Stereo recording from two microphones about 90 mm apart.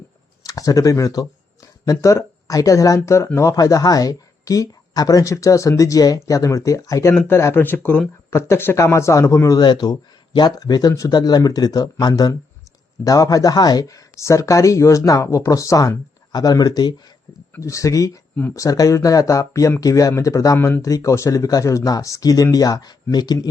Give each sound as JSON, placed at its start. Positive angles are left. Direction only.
{"t": 0.4, "sound": "speech", "side_deg": 40}
{"t": 7.3, "sound": "speech", "side_deg": 25}
{"t": 9.6, "sound": "speech", "side_deg": 50}
{"t": 17.6, "sound": "speech", "side_deg": 35}
{"t": 20.6, "sound": "speech", "side_deg": 25}
{"t": 20.8, "sound": "speech", "side_deg": 35}